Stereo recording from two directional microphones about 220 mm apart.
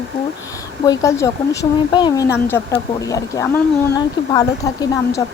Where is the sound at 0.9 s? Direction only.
15° left (ahead or behind).